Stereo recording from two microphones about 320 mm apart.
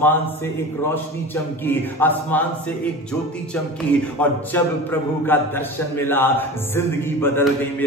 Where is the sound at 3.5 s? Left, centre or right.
Centre.